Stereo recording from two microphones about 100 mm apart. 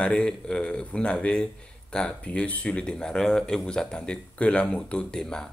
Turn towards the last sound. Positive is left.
turn(degrees=5)  # may be behind; listen again after turning